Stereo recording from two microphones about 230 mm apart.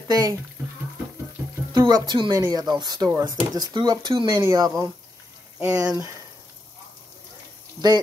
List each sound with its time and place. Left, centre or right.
0.1 s speech: centre
1.7 s speech: centre